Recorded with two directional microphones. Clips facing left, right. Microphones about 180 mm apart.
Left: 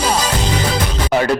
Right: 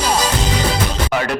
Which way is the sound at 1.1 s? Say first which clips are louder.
Left 8 dB; 30° left (ahead or behind).